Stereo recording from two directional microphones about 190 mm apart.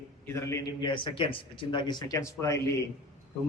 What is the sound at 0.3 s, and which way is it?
A man's voice, 15° left (ahead or behind).